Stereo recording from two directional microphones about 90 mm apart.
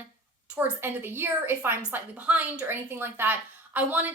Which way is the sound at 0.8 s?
25° right (ahead or behind).